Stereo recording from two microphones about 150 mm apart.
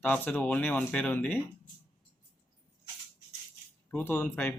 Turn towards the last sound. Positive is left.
turn(degrees=10)  # may be behind; listen again after turning